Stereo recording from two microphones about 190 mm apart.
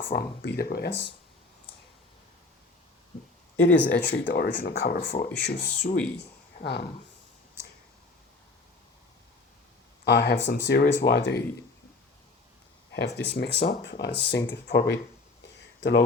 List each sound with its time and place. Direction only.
0.0 s speech: 60° left (ahead or behind)
3.8 s speech: 65° left (ahead or behind)
4.5 s speech: 50° left (ahead or behind)
6.6 s speech: 60° left (ahead or behind)
10.0 s speech: 60° left (ahead or behind)
13.1 s speech: 60° left (ahead or behind)